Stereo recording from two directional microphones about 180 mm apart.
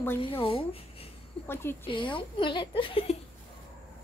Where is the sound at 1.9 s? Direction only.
30° left (ahead or behind).